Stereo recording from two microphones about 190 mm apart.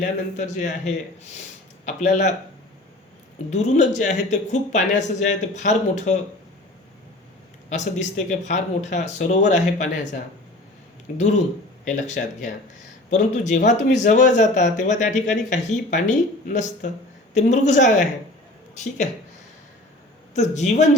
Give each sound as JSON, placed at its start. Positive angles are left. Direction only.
{"t": 0.0, "sound": "speech", "side_deg": 40}
{"t": 3.5, "sound": "speech", "side_deg": 40}
{"t": 7.7, "sound": "speech", "side_deg": 40}
{"t": 11.1, "sound": "speech", "side_deg": 45}
{"t": 20.3, "sound": "speech", "side_deg": 35}